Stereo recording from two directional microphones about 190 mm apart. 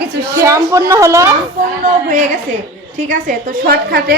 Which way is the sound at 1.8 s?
45° right (ahead or behind).